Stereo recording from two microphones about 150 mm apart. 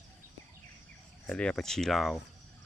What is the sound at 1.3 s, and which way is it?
Speech, 5° left (ahead or behind).